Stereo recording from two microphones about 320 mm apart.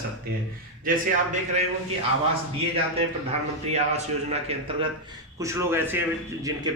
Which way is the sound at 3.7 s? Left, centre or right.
Right.